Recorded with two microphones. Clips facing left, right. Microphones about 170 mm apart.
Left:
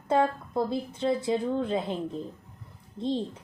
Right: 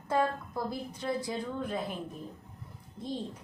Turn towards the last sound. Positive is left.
turn(degrees=25)  # may be behind; listen again after turning